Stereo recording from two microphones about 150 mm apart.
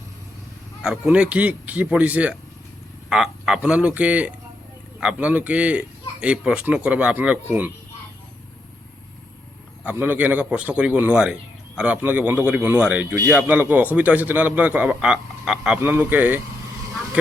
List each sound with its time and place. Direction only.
0.8 s a man's voice: 5° right (ahead or behind)
9.8 s a man's voice: 10° right (ahead or behind)